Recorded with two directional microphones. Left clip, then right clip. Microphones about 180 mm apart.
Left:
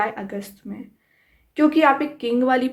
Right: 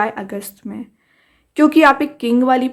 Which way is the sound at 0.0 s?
35° right (ahead or behind).